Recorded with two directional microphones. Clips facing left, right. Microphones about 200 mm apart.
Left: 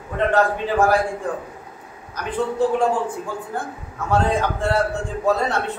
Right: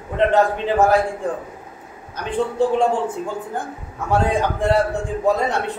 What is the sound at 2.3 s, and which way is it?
Speech, 25° right (ahead or behind).